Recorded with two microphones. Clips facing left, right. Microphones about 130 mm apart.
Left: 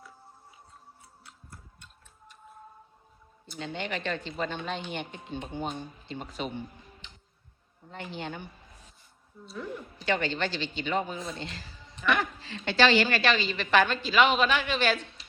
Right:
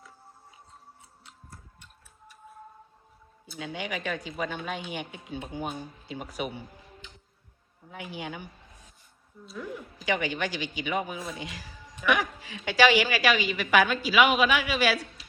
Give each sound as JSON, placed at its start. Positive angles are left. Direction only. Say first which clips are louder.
{"t": 1.2, "sound": "tick-tock", "louder": "right 1 dB", "side_deg": -20}
{"t": 3.4, "sound": "speech", "louder": "even", "side_deg": -10}
{"t": 7.9, "sound": "speech", "louder": "even", "side_deg": -10}